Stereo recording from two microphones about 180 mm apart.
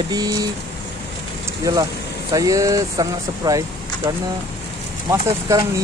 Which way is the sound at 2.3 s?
20° right (ahead or behind).